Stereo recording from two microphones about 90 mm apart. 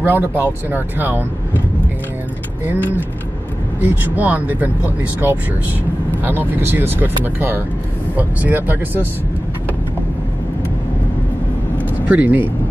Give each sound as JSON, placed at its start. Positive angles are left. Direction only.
{"t": 0.0, "sound": "speech", "side_deg": -25}
{"t": 2.7, "sound": "speech", "side_deg": -20}
{"t": 12.1, "sound": "speech", "side_deg": -15}